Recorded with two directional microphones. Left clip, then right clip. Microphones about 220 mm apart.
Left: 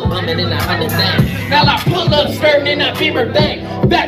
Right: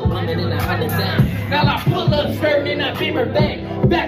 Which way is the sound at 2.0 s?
55° left (ahead or behind).